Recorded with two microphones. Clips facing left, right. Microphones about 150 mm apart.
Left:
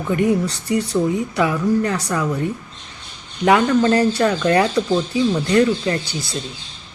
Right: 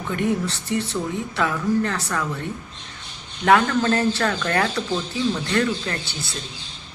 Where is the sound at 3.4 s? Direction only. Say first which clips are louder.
Left 3 dB; 15° left (ahead or behind).